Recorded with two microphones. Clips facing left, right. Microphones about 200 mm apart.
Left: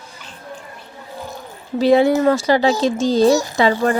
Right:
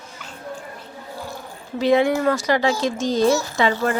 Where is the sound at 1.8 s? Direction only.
35° left (ahead or behind).